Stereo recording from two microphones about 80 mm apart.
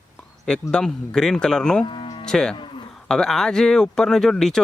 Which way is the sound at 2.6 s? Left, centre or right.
Left.